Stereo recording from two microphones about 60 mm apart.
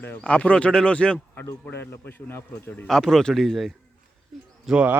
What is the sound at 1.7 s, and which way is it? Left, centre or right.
A man's voice, left.